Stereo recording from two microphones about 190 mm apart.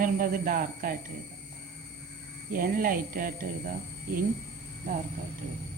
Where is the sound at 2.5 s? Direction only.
50° right (ahead or behind).